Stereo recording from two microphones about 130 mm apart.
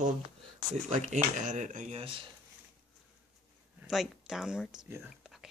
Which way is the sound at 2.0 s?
40° right (ahead or behind).